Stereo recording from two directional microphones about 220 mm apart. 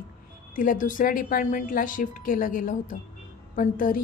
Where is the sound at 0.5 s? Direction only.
35° left (ahead or behind).